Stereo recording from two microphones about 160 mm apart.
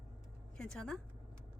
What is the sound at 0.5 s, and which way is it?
Speech, 5° left (ahead or behind).